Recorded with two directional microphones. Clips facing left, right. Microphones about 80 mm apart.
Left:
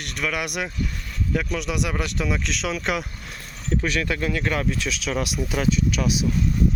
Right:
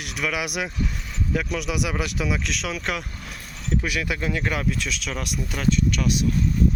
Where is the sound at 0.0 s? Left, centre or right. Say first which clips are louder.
Even; centre.